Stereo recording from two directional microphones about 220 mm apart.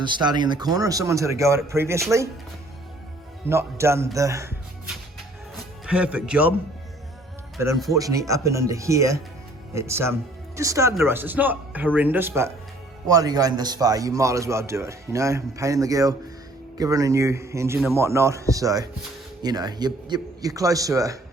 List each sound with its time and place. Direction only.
0.0 s a man's voice: 20° right (ahead or behind)
3.5 s a man's voice: 10° right (ahead or behind)
5.8 s speech: 5° right (ahead or behind)
7.9 s a man's voice: 15° right (ahead or behind)